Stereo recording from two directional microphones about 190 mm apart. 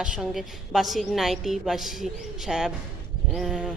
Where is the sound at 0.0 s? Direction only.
Centre (ahead or behind).